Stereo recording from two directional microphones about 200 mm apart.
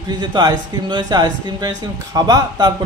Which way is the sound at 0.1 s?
20° right (ahead or behind).